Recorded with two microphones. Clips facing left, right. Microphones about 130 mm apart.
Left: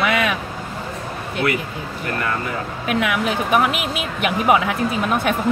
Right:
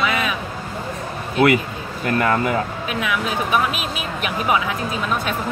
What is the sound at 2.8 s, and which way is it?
Speech, 65° left (ahead or behind).